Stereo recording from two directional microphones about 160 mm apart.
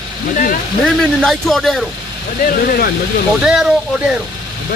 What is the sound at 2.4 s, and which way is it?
Speech, 65° left (ahead or behind).